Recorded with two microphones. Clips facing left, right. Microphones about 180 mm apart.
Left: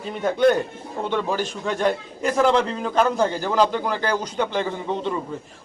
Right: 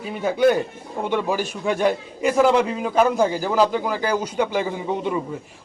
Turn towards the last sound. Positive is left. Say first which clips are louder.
# right 1 dB
turn(degrees=-10)  # may be behind; listen again after turning